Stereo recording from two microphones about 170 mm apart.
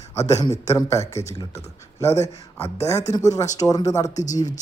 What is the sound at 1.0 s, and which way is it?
Speech, 40° left (ahead or behind).